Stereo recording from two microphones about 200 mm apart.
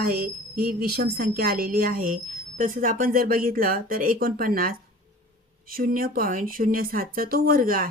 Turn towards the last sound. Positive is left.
turn(degrees=-45)  # may be behind; listen again after turning